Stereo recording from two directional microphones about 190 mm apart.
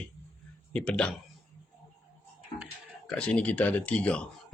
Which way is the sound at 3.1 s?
5° left (ahead or behind).